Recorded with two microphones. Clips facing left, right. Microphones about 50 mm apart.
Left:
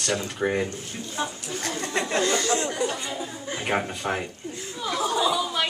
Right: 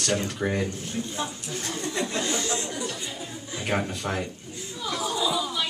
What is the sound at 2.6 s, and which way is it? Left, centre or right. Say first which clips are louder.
Chatter: left 5 dB; left.